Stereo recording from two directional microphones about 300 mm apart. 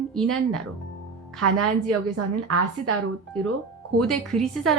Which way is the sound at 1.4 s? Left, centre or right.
Right.